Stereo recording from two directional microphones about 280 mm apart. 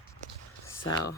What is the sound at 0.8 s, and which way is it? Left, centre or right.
Speech, left.